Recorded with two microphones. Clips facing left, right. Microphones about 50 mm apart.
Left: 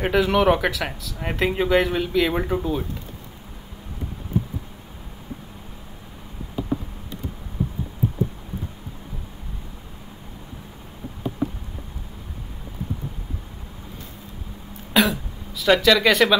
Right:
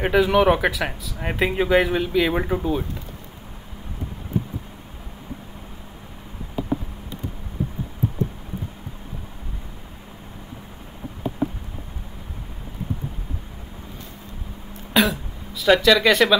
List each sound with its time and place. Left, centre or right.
0.0 s speech: centre
15.0 s throat clearing: centre